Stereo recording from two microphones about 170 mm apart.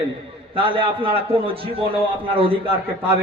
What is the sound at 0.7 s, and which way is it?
A man's voice, 30° right (ahead or behind).